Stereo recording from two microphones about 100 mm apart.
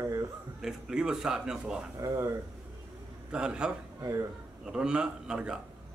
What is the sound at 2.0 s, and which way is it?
Speech, 35° right (ahead or behind).